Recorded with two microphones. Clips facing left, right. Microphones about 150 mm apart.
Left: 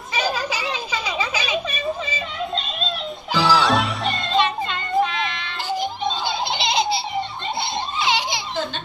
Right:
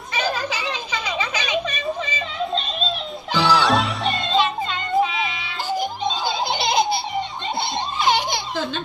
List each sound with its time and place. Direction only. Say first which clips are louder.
0.2 s children playing: even; 10° left (ahead or behind)
1.2 s a sound: right 1 dB; 10° left (ahead or behind)
3.3 s music: even; centre (ahead or behind)
6.2 s laughter: right 2 dB; 45° right (ahead or behind)
7.9 s children playing: right 3 dB; 50° right (ahead or behind)